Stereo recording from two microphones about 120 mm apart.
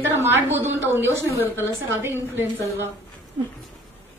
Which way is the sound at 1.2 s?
20° left (ahead or behind).